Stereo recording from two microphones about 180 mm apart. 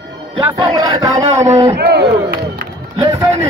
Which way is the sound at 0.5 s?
15° right (ahead or behind).